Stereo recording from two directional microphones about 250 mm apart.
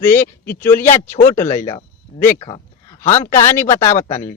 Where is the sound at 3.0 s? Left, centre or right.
Centre.